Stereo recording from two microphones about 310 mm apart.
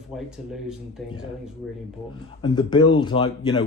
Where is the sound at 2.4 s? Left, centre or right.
Centre.